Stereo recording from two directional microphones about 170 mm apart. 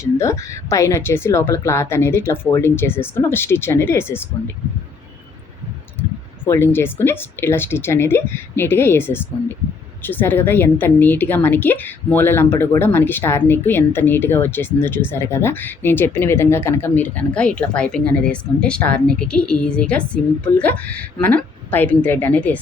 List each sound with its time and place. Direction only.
0.0 s a woman's voice: 15° left (ahead or behind)
6.0 s a woman's voice: 15° left (ahead or behind)